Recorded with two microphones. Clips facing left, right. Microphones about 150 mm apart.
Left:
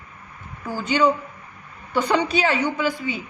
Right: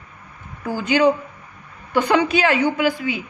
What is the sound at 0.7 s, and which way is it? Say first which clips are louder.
Speech: right 3 dB; 90° right.